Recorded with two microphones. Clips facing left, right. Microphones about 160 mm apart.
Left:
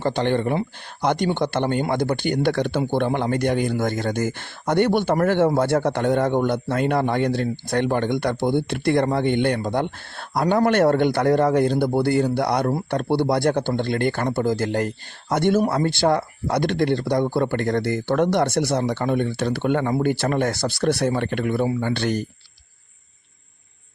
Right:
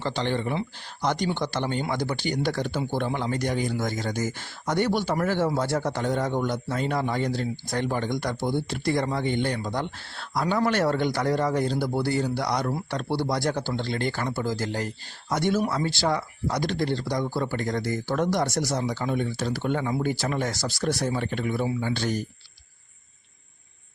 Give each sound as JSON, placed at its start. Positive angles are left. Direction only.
{"t": 0.0, "sound": "speech", "side_deg": 55}